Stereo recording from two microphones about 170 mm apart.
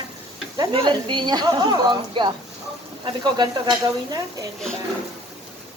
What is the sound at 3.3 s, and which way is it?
A woman's voice, 25° right (ahead or behind).